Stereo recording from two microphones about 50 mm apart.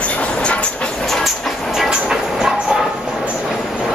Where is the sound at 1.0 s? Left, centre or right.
Centre.